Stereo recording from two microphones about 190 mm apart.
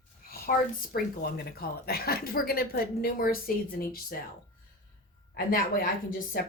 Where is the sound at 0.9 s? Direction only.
60° left (ahead or behind).